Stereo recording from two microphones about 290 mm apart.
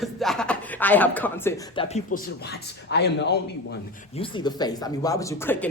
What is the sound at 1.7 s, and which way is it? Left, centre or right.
A man's voice, left.